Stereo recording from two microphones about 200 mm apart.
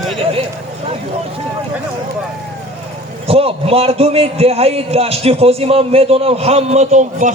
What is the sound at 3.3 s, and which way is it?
A man's voice, 30° right (ahead or behind).